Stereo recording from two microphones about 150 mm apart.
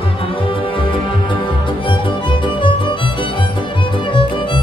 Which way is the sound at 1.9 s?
35° left (ahead or behind).